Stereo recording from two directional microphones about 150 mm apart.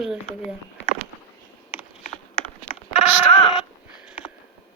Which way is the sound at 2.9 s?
45° left (ahead or behind).